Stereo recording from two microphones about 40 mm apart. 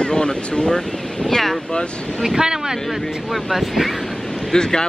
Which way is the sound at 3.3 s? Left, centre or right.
Centre.